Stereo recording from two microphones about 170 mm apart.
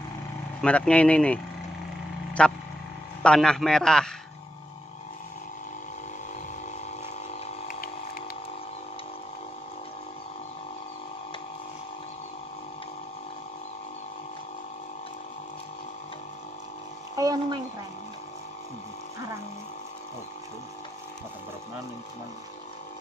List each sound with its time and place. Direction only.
0.6 s a man's voice: 5° left (ahead or behind)
7.6 s vehicle: 60° left (ahead or behind)
17.1 s a sound: 20° right (ahead or behind)